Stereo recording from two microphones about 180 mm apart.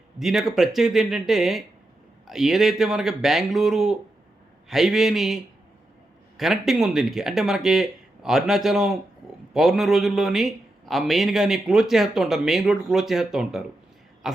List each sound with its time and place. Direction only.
0.2 s speech: centre (ahead or behind)